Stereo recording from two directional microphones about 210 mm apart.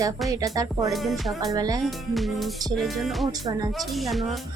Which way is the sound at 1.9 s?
Centre (ahead or behind).